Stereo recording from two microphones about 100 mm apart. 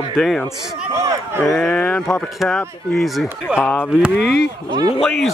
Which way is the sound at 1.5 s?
10° left (ahead or behind).